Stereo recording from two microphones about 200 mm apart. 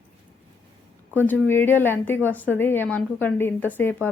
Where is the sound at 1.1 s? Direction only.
10° left (ahead or behind).